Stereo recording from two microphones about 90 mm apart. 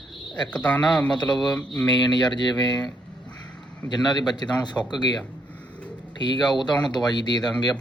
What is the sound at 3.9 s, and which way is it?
A man's voice, 55° left (ahead or behind).